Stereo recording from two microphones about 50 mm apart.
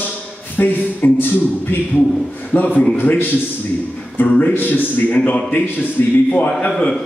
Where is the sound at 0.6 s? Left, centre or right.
Left.